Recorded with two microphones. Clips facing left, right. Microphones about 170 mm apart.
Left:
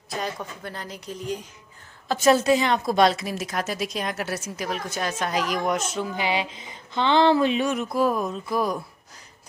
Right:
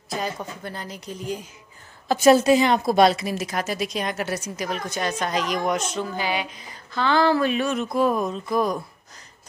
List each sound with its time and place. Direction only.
0.1 s a woman's voice: centre (ahead or behind)
6.1 s speech: 25° left (ahead or behind); by 8.7 s 5° left (ahead or behind)